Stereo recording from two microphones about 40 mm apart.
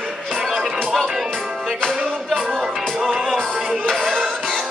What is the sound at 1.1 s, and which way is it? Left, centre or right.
Music, centre.